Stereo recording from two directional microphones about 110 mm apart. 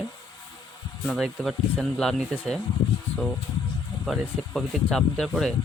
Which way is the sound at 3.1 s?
70° left (ahead or behind).